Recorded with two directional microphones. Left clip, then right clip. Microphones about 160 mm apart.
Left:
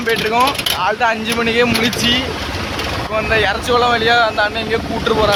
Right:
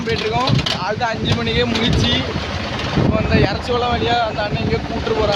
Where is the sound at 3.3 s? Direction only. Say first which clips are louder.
Left 4 dB; 5° left (ahead or behind).